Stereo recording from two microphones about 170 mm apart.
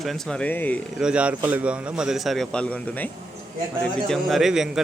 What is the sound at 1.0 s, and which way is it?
A man's voice, 5° right (ahead or behind).